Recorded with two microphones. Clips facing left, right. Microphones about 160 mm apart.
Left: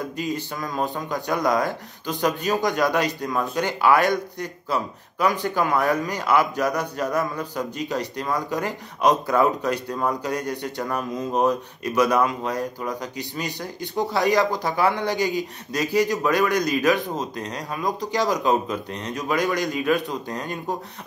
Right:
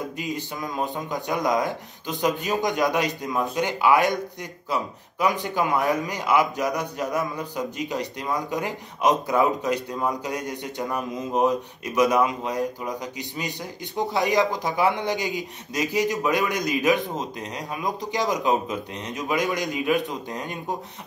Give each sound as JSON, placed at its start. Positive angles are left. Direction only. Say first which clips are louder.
{"t": 0.2, "sound": "a man's voice", "louder": "left 2 dB", "side_deg": -20}